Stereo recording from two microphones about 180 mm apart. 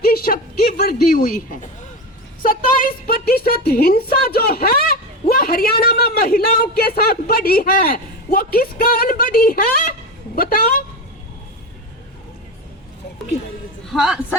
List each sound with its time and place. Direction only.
0.0 s a sound: 55° left (ahead or behind)
2.4 s a woman's voice: 50° left (ahead or behind)
13.8 s a man's voice: centre (ahead or behind)